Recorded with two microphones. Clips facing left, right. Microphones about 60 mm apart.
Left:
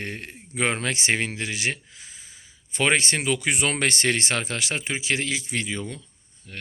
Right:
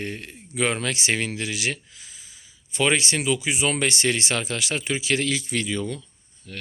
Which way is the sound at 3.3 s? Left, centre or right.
Left.